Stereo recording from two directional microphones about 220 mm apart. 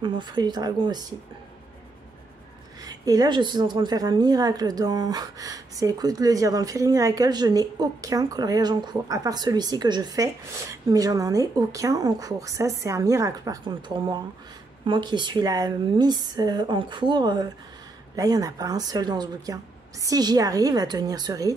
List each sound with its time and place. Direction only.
0.0 s speech: 20° right (ahead or behind)
2.8 s a woman's voice: 15° right (ahead or behind)